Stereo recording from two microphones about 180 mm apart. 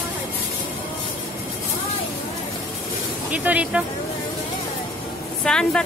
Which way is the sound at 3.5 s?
5° right (ahead or behind).